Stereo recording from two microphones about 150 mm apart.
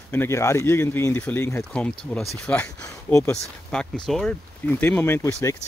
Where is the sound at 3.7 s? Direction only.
5° left (ahead or behind).